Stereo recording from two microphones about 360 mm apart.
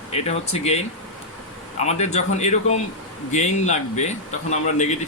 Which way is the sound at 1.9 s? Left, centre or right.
Centre.